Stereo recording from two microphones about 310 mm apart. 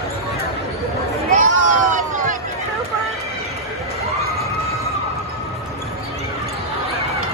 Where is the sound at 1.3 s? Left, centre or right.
Right.